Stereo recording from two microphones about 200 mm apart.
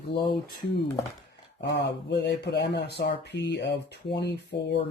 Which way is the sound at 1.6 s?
60° left (ahead or behind).